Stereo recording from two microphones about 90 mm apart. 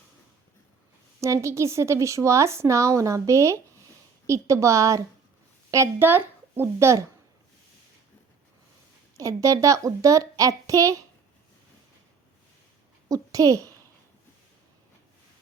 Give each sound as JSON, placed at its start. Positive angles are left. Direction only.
{"t": 1.2, "sound": "a woman's voice", "side_deg": -35}
{"t": 6.0, "sound": "a child's voice", "side_deg": -25}
{"t": 9.1, "sound": "a woman's voice", "side_deg": -40}
{"t": 13.1, "sound": "a child's voice", "side_deg": -40}